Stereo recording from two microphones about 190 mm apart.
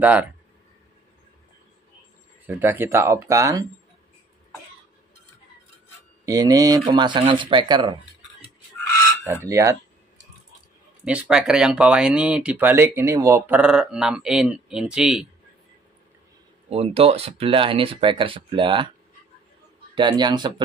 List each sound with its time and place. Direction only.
0.0 s speech: 5° right (ahead or behind)
2.4 s speech: 10° right (ahead or behind)
6.2 s speech: 20° right (ahead or behind)
9.2 s speech: 15° right (ahead or behind)
11.1 s speech: 5° right (ahead or behind)
16.7 s speech: 30° right (ahead or behind)
20.0 s speech: 25° right (ahead or behind)